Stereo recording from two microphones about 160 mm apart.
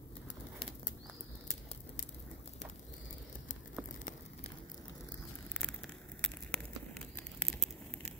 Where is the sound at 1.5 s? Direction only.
45° left (ahead or behind).